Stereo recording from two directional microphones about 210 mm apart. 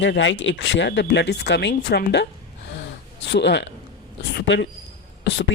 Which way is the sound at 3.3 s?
55° left (ahead or behind).